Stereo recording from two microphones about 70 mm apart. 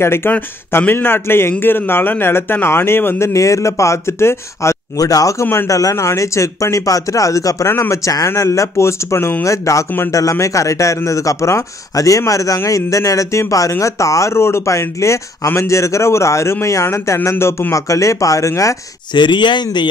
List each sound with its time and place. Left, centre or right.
0.0 s speech: left
3.3 s speech: left
4.9 s speech: left
5.4 s speech: left
5.7 s speech: left
19.1 s speech: left